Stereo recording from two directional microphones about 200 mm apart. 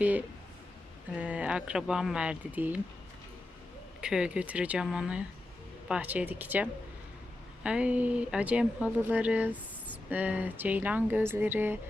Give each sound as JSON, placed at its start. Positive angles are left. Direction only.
{"t": 0.0, "sound": "speech", "side_deg": -10}
{"t": 4.0, "sound": "speech", "side_deg": -5}